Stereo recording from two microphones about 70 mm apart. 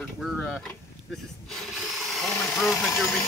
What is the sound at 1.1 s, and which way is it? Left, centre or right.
Drill, centre.